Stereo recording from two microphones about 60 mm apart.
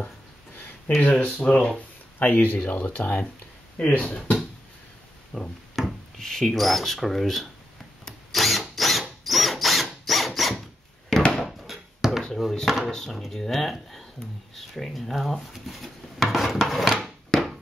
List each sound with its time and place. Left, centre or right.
1.0 s speech: left
2.1 s speech: left
5.3 s speech: centre
8.0 s drill: centre
11.3 s a sound: centre
12.4 s drawer open or close: centre
12.9 s speech: centre
17.3 s a sound: centre